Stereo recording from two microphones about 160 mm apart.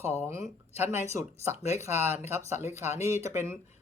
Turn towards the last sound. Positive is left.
turn(degrees=-15)  # may be behind; listen again after turning